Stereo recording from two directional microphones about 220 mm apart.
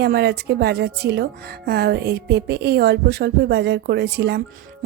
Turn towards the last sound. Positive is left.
turn(degrees=-50)  # may be behind; listen again after turning